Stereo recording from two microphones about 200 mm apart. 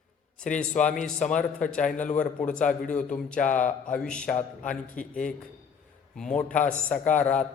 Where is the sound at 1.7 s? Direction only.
5° left (ahead or behind).